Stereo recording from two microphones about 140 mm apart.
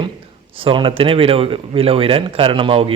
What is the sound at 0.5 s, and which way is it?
A man's voice, 40° right (ahead or behind).